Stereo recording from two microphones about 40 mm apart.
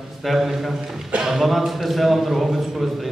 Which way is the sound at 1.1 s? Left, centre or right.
Right.